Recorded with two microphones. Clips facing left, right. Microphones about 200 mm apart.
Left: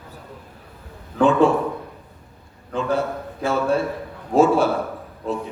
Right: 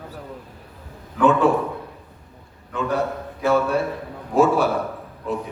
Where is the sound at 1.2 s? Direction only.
25° left (ahead or behind).